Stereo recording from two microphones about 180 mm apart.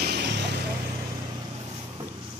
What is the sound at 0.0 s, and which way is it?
Vehicle, 65° right (ahead or behind).